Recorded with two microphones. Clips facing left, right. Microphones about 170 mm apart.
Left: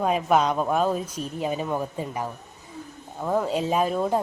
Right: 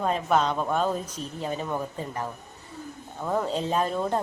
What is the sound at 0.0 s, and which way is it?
Speech, 10° left (ahead or behind).